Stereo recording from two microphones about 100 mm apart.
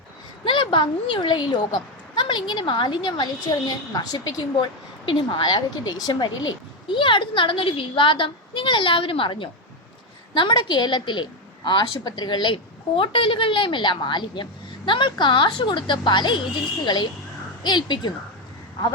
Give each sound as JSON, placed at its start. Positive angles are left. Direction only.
{"t": 0.4, "sound": "a woman's voice", "side_deg": 55}